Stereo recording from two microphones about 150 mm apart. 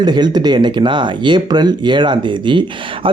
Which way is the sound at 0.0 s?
30° right (ahead or behind).